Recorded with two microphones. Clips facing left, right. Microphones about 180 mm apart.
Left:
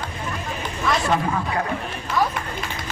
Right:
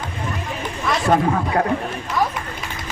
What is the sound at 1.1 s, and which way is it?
Speech, 45° right (ahead or behind).